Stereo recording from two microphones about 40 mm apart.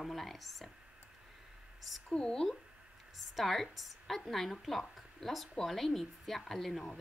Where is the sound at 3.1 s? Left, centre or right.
Centre.